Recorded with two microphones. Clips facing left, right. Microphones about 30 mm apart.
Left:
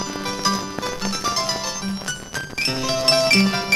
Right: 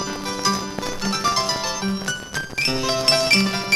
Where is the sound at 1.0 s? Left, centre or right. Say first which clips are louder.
Right 4 dB; centre.